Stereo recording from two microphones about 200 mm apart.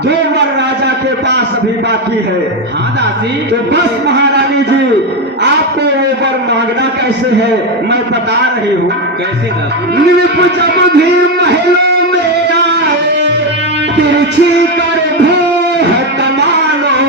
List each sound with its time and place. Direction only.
10.8 s guitar: 55° right (ahead or behind)